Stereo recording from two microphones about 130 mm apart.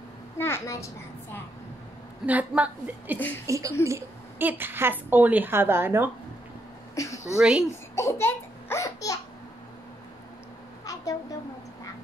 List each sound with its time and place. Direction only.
0.4 s a child's voice: 20° left (ahead or behind)
2.2 s a woman's voice: 10° right (ahead or behind)
3.4 s a woman's voice: 25° right (ahead or behind)
7.0 s a woman's voice: 25° left (ahead or behind)
7.3 s a woman's voice: 5° right (ahead or behind)
7.9 s laughter: 20° left (ahead or behind)